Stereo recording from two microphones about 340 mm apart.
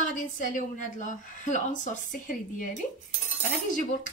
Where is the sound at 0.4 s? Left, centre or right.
Left.